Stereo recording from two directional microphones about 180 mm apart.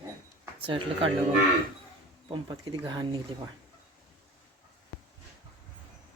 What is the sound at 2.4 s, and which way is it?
Speech, 25° right (ahead or behind).